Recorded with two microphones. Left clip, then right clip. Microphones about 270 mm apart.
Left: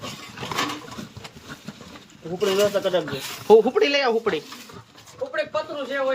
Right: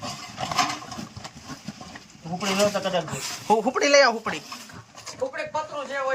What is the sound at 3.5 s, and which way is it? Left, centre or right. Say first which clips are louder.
Speech: left 4 dB; centre.